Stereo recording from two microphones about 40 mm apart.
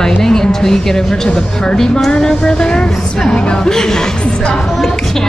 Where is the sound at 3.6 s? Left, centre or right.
Centre.